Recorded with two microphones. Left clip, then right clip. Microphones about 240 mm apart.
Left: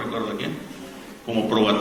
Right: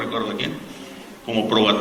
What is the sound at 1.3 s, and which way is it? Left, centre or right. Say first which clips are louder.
Speech: right 2 dB; left.